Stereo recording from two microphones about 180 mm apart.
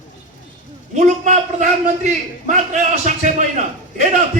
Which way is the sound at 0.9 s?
40° right (ahead or behind).